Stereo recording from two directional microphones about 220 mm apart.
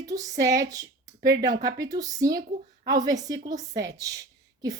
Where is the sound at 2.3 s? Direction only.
40° right (ahead or behind).